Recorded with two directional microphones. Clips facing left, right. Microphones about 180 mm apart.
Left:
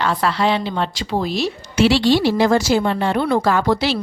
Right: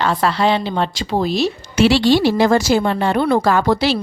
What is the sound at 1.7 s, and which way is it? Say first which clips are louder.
A woman's voice: right 1 dB; 50° right (ahead or behind).